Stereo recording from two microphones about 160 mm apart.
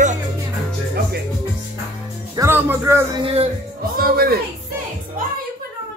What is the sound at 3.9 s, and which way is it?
Speech, 65° right (ahead or behind).